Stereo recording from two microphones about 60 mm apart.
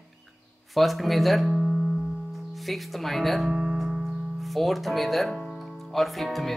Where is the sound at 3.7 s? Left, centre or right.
Centre.